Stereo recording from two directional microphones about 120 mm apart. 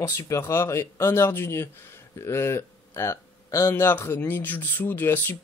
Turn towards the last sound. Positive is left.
turn(degrees=15)  # may be behind; listen again after turning